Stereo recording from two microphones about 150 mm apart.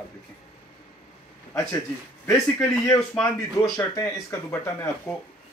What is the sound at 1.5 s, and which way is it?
Speech, 15° left (ahead or behind).